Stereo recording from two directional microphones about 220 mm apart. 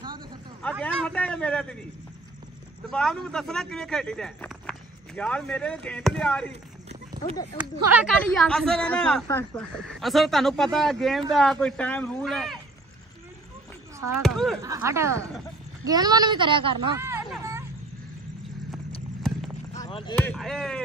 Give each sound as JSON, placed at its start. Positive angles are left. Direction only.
{"t": 0.6, "sound": "a man's voice", "side_deg": 5}
{"t": 2.9, "sound": "speech", "side_deg": 5}
{"t": 7.1, "sound": "a sound", "side_deg": -20}
{"t": 7.5, "sound": "speech", "side_deg": -10}
{"t": 8.2, "sound": "speech", "side_deg": 5}
{"t": 9.8, "sound": "speech", "side_deg": 0}
{"t": 14.2, "sound": "speech", "side_deg": 0}
{"t": 14.6, "sound": "speech", "side_deg": -15}
{"t": 17.0, "sound": "a sound", "side_deg": -10}
{"t": 19.8, "sound": "a sound", "side_deg": 20}
{"t": 20.2, "sound": "speech", "side_deg": 5}